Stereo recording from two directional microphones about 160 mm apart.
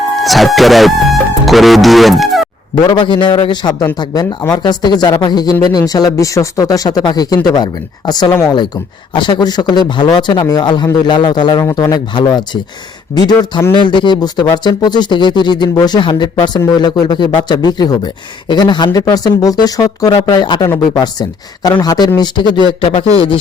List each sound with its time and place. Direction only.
0.2 s music: centre (ahead or behind)
2.8 s speech: 30° left (ahead or behind)
9.1 s speech: 30° left (ahead or behind)